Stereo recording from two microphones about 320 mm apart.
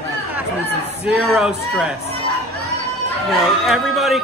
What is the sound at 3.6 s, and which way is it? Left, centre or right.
Mantra, centre.